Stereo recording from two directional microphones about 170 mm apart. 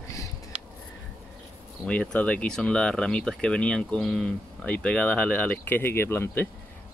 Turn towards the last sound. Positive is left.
turn(degrees=15)  # may be behind; listen again after turning